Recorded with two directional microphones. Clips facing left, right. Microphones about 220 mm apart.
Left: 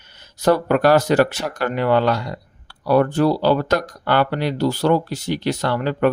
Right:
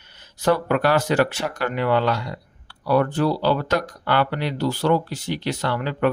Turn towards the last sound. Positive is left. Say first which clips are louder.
# left 4 dB
turn(degrees=45)  # may be behind; listen again after turning